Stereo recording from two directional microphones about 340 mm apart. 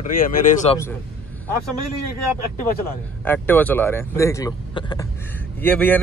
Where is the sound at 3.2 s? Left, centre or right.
Centre.